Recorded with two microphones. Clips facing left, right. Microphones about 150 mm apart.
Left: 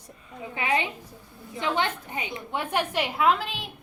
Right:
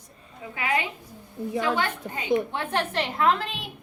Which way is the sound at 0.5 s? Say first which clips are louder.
Left 1 dB; 25° left (ahead or behind).